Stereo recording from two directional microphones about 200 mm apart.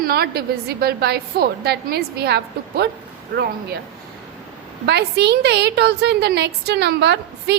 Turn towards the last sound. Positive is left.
turn(degrees=-55)  # may be behind; listen again after turning